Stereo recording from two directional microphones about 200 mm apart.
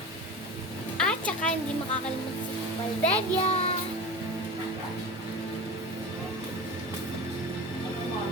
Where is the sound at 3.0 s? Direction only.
30° left (ahead or behind).